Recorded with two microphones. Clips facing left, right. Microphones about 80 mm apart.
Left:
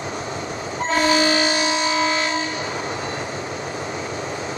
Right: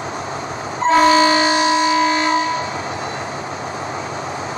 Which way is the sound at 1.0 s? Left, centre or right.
Right.